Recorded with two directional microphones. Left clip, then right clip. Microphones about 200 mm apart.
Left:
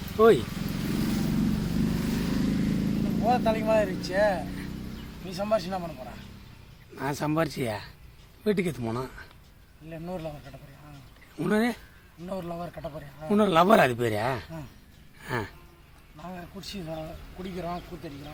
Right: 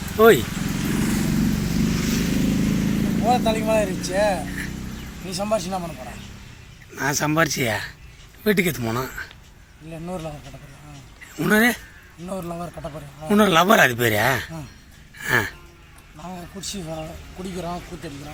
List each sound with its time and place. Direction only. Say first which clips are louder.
0.2 s a man's voice: right 5 dB; centre (ahead or behind)
0.4 s vehicle: right 7 dB; 50° left (ahead or behind)
1.9 s vehicle: right 6 dB; 35° left (ahead or behind)
3.0 s a man's voice: right 5 dB; centre (ahead or behind)
6.9 s a man's voice: right 7 dB; 5° left (ahead or behind)
11.3 s a man's voice: right 9 dB; centre (ahead or behind)
15.2 s a sound: right 12 dB; centre (ahead or behind)
16.1 s a man's voice: right 5 dB; centre (ahead or behind)